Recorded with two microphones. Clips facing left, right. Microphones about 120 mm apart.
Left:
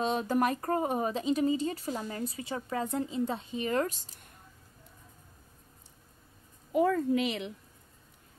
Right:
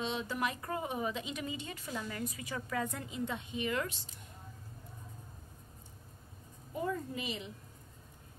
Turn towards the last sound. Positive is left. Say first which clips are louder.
# left 11 dB
turn(degrees=70)  # may be behind; listen again after turning